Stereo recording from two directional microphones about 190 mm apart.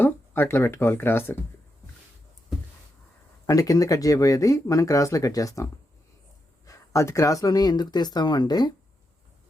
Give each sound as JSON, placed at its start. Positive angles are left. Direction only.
{"t": 0.0, "sound": "speech", "side_deg": 10}
{"t": 3.4, "sound": "speech", "side_deg": 15}